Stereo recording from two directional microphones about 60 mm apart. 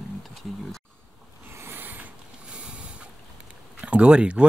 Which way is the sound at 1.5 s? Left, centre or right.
Right.